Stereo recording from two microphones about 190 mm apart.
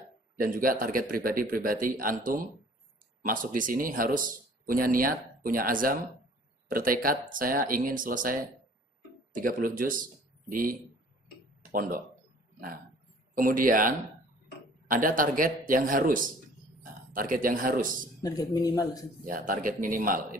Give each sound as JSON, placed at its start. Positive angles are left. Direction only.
{"t": 0.4, "sound": "a man's voice", "side_deg": -50}
{"t": 13.3, "sound": "a man's voice", "side_deg": -45}
{"t": 18.2, "sound": "a man's voice", "side_deg": 20}
{"t": 19.2, "sound": "a man's voice", "side_deg": -45}